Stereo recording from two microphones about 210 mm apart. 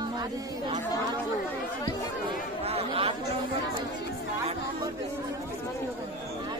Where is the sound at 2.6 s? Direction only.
30° right (ahead or behind).